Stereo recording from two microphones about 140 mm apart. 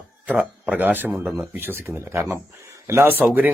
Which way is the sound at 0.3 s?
10° right (ahead or behind).